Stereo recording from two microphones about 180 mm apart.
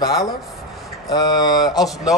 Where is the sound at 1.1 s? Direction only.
25° left (ahead or behind).